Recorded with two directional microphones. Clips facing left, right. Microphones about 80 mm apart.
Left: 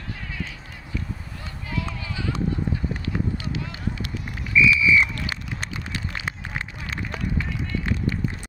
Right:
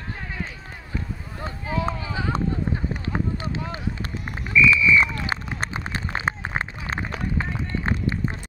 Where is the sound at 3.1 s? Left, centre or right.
Right.